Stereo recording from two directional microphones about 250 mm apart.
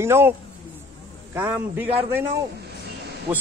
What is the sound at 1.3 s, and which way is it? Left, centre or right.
Speech, centre.